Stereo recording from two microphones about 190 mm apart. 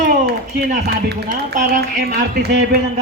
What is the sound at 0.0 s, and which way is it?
Speech, 50° right (ahead or behind).